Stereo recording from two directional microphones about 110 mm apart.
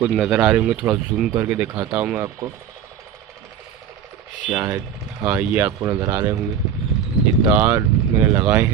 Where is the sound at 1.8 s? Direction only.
25° right (ahead or behind).